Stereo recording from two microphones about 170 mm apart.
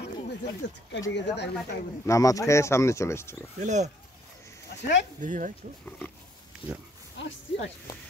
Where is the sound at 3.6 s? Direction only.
45° right (ahead or behind).